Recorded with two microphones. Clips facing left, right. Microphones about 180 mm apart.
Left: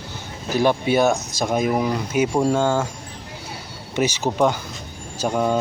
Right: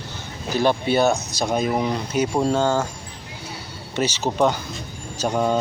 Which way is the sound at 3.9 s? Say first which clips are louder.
Left 1 dB; 15° left (ahead or behind).